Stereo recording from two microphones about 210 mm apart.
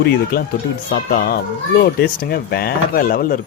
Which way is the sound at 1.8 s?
45° left (ahead or behind).